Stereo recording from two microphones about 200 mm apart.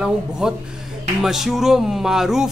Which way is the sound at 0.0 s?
5° right (ahead or behind).